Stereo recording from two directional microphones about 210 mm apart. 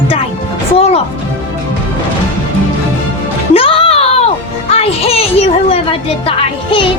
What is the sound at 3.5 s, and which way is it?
Music, 25° left (ahead or behind).